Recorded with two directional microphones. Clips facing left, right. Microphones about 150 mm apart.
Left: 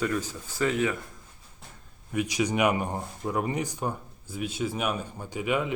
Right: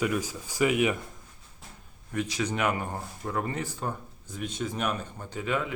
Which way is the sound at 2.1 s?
15° left (ahead or behind).